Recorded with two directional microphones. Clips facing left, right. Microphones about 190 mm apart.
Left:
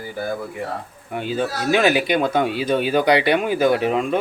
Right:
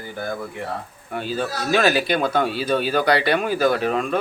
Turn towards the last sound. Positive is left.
turn(degrees=20)  # may be behind; listen again after turning